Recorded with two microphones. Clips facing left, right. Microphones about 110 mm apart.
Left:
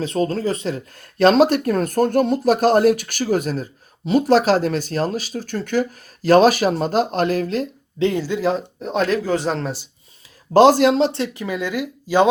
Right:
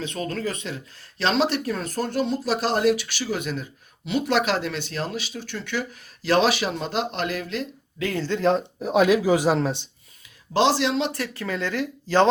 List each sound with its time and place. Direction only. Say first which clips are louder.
0.0 s speech: left 7 dB; 35° left (ahead or behind)
0.9 s speech: left 9 dB; 45° left (ahead or behind)
7.9 s speech: left 8 dB; 25° left (ahead or behind)
8.2 s speech: left 1 dB; 5° left (ahead or behind)
10.5 s speech: left 8 dB; 45° left (ahead or behind)
11.1 s speech: left 4 dB; 20° left (ahead or behind)